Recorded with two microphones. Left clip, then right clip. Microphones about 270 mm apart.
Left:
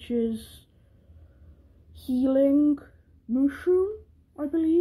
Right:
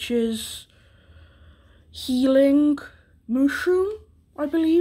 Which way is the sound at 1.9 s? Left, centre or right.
Centre.